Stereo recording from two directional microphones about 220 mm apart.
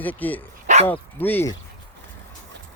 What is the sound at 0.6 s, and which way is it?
Dog, 30° right (ahead or behind).